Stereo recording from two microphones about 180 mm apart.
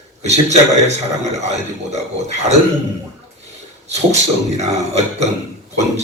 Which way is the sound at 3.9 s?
40° right (ahead or behind).